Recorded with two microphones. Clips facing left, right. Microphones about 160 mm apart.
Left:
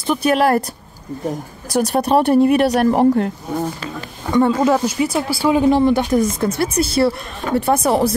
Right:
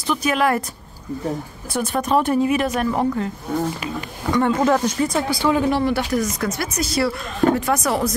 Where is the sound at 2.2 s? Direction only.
60° left (ahead or behind).